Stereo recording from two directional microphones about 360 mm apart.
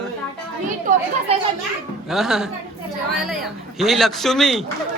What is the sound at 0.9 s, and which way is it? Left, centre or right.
Speech, right.